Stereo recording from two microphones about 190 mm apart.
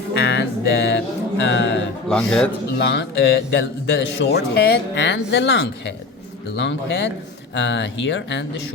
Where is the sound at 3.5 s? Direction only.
65° left (ahead or behind).